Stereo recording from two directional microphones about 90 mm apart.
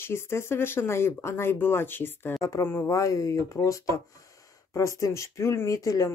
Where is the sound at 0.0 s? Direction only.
30° left (ahead or behind).